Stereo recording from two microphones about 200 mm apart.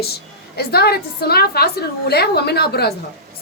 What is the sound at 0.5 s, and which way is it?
Speech, 50° left (ahead or behind).